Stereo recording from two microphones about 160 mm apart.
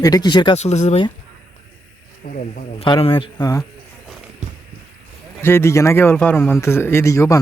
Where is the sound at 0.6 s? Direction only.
45° left (ahead or behind).